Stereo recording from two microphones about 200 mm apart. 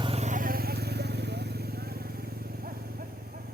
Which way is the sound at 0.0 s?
30° right (ahead or behind).